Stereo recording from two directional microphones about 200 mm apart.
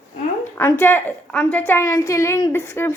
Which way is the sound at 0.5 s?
10° left (ahead or behind).